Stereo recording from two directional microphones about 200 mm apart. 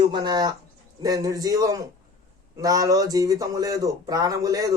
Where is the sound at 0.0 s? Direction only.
20° right (ahead or behind).